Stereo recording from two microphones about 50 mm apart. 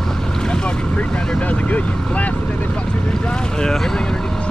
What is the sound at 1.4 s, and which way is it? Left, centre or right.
Vehicle, left.